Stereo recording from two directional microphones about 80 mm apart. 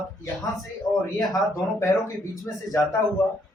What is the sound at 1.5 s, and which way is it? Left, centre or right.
Speech, left.